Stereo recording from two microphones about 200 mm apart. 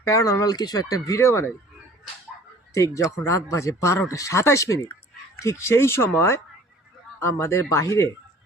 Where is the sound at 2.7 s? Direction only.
15° left (ahead or behind).